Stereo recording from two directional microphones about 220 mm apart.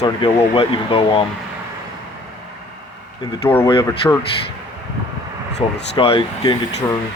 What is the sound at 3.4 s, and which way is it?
Speech, 10° left (ahead or behind).